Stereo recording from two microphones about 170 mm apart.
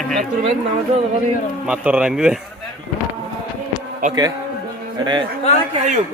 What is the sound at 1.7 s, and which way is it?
Speech, 5° right (ahead or behind).